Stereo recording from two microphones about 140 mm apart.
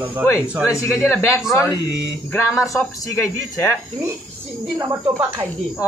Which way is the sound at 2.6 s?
20° left (ahead or behind).